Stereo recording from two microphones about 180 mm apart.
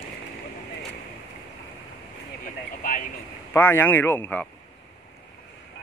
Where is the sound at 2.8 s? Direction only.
45° left (ahead or behind).